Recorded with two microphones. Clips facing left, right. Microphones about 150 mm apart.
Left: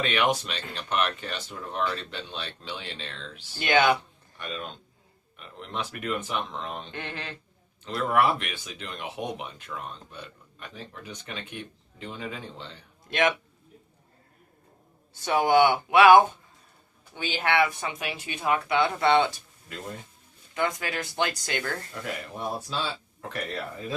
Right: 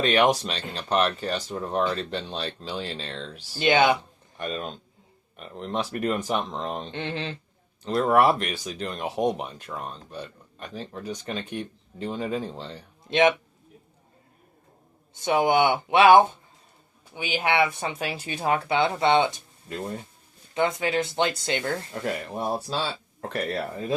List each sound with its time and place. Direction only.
0.0 s speech: 35° right (ahead or behind)
3.6 s speech: 25° right (ahead or behind)
4.4 s speech: 40° right (ahead or behind); by 7.3 s 25° right (ahead or behind)
7.9 s speech: 40° right (ahead or behind)
13.1 s a man's voice: 20° right (ahead or behind)
15.1 s speech: 20° right (ahead or behind)
17.7 s speech: 30° right (ahead or behind)
22.4 s speech: 35° right (ahead or behind)